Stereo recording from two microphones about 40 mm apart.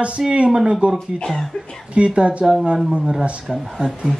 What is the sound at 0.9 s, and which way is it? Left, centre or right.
Speech, centre.